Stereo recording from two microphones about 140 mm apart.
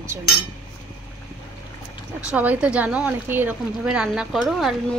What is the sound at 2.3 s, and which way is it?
A woman's voice, 10° right (ahead or behind).